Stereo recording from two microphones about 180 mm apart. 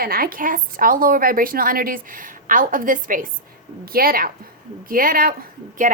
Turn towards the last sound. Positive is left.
turn(degrees=-45)  # may be behind; listen again after turning